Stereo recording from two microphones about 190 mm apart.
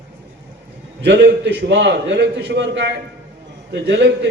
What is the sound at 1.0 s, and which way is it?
A man's voice, 65° right (ahead or behind).